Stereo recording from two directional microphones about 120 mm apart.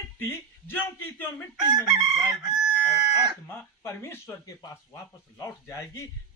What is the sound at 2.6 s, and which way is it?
Chicken, 10° right (ahead or behind).